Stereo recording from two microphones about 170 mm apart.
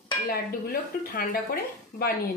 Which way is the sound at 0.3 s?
60° left (ahead or behind).